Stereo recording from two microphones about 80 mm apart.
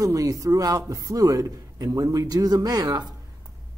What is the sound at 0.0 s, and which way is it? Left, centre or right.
A man's voice, right.